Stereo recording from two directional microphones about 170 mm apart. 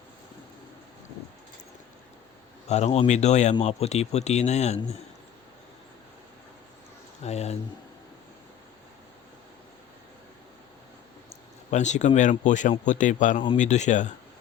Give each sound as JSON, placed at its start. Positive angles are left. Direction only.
{"t": 2.6, "sound": "speech", "side_deg": 40}
{"t": 7.2, "sound": "speech", "side_deg": 40}
{"t": 11.7, "sound": "speech", "side_deg": 45}